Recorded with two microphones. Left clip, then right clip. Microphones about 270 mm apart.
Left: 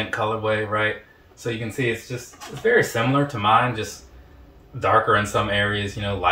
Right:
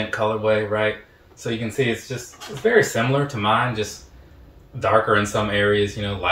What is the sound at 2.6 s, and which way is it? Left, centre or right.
Speech, centre.